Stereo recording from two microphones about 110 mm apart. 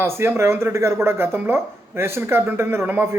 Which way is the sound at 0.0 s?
20° right (ahead or behind).